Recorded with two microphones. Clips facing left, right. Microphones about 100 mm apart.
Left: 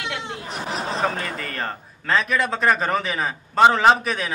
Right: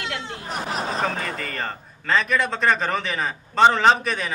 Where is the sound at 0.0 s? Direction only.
20° left (ahead or behind).